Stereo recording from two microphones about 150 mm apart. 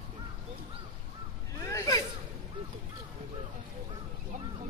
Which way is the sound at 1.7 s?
20° left (ahead or behind).